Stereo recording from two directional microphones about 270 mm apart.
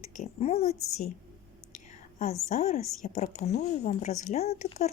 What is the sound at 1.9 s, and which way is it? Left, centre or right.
Whispering, left.